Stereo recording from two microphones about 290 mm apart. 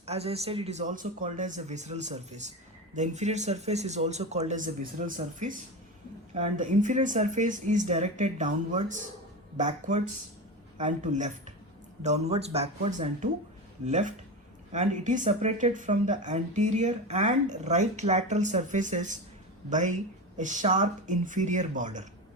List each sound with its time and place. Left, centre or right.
0.0 s speech: right